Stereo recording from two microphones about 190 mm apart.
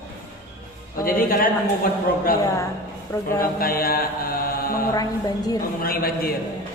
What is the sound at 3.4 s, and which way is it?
A man's voice, 50° left (ahead or behind).